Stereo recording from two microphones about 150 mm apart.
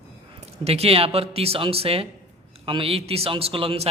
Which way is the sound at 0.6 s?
40° right (ahead or behind).